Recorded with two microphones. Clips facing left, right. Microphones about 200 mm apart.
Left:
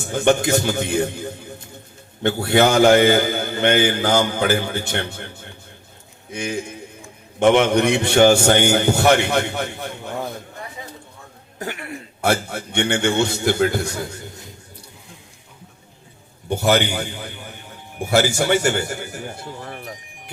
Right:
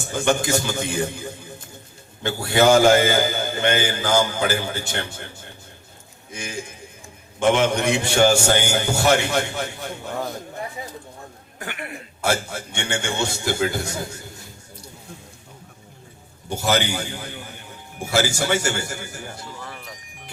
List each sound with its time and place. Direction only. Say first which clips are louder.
0.0 s a man's voice: left 4 dB; 60° left (ahead or behind)
11.6 s throat clearing: left 4 dB; 35° left (ahead or behind)
12.2 s a man's voice: left 3 dB; 60° left (ahead or behind)
16.5 s a man's voice: left 4 dB; 55° left (ahead or behind)